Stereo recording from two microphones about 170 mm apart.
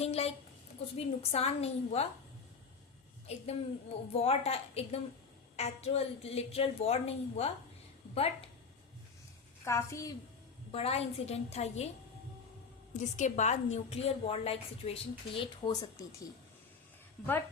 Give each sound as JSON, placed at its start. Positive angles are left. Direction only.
{"t": 0.0, "sound": "a woman's voice", "side_deg": 35}
{"t": 4.1, "sound": "a woman's voice", "side_deg": 35}
{"t": 9.6, "sound": "a woman's voice", "side_deg": 15}
{"t": 10.7, "sound": "a woman's voice", "side_deg": 35}
{"t": 12.9, "sound": "a woman's voice", "side_deg": 45}